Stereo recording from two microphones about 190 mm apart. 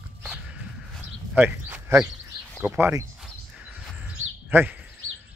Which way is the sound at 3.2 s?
5° right (ahead or behind).